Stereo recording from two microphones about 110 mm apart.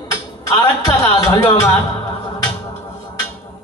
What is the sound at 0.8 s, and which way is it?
Speech, 25° left (ahead or behind).